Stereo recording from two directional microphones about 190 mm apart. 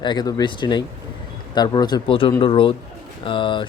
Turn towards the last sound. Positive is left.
turn(degrees=25)  # may be behind; listen again after turning